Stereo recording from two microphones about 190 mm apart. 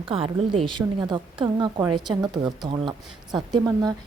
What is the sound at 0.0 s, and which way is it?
A woman's voice, 30° right (ahead or behind).